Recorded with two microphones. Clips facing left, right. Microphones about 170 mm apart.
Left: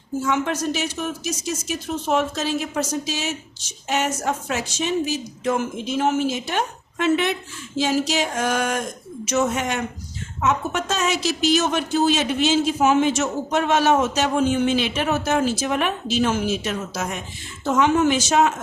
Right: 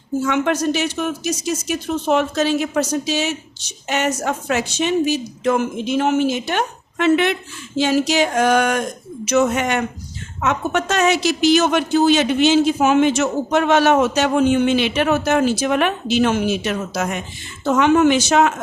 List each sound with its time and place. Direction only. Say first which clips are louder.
0.3 s a woman's voice: right 4 dB; 70° right (ahead or behind)